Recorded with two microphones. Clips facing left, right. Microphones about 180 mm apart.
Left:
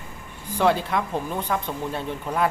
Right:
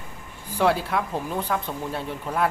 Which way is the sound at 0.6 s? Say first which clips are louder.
Left 1 dB; 5° right (ahead or behind).